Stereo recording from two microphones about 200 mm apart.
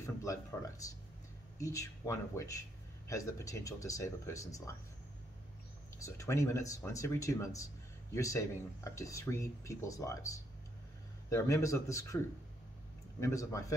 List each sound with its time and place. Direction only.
0.0 s a sound: 15° left (ahead or behind)
1.6 s speech: 15° left (ahead or behind)
5.9 s speech: 15° left (ahead or behind)
13.2 s speech: 15° left (ahead or behind)